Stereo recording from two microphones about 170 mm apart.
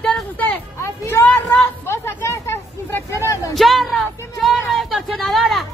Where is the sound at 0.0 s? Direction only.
5° left (ahead or behind).